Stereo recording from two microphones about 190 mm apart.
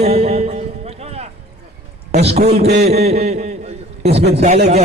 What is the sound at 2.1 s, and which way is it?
Speech, 35° right (ahead or behind).